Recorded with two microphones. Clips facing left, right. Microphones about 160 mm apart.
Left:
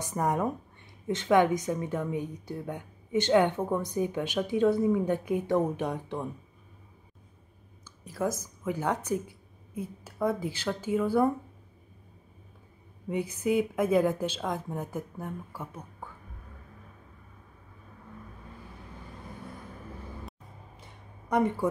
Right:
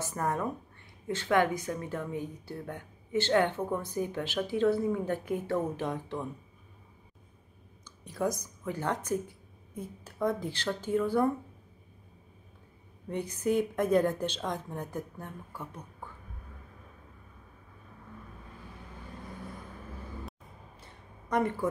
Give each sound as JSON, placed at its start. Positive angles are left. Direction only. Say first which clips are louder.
{"t": 0.0, "sound": "a woman's voice", "louder": "left 3 dB", "side_deg": 15}
{"t": 7.8, "sound": "a woman's voice", "louder": "left 1 dB", "side_deg": 5}
{"t": 13.1, "sound": "a woman's voice", "louder": "left 2 dB", "side_deg": 10}
{"t": 21.3, "sound": "speech", "louder": "left 3 dB", "side_deg": 15}